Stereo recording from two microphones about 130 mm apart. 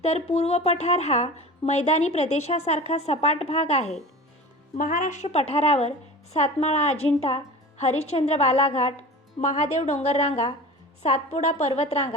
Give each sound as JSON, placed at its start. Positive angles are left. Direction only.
{"t": 0.0, "sound": "a woman's voice", "side_deg": 55}
{"t": 4.8, "sound": "a woman's voice", "side_deg": 85}
{"t": 9.4, "sound": "a woman's voice", "side_deg": 65}